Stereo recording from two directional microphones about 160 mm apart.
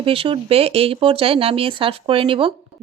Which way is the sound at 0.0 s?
35° right (ahead or behind).